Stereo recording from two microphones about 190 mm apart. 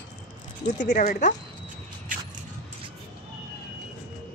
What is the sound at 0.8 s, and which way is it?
Speech, 40° left (ahead or behind).